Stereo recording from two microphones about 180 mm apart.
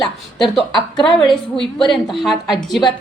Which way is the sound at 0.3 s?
Centre (ahead or behind).